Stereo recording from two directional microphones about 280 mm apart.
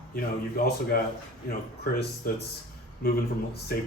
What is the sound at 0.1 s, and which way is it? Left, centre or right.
Speech, left.